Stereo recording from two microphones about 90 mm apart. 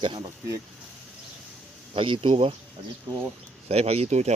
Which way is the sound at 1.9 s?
75° right (ahead or behind).